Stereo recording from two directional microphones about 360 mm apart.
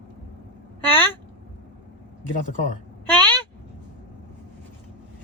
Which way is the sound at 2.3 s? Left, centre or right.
Left.